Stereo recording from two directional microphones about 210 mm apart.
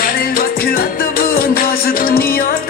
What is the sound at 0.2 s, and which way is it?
Music, 45° left (ahead or behind).